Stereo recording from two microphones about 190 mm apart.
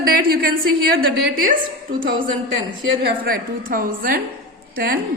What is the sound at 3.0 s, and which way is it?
A woman's voice, 50° right (ahead or behind).